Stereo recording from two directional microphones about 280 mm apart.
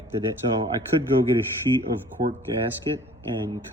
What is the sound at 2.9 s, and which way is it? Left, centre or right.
Speech, centre.